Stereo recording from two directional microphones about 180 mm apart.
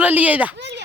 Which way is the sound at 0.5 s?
75° right (ahead or behind).